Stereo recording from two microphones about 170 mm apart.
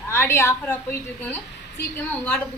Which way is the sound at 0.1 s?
15° left (ahead or behind).